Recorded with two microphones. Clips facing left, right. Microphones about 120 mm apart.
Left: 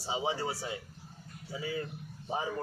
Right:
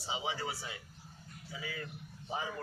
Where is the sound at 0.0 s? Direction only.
35° left (ahead or behind).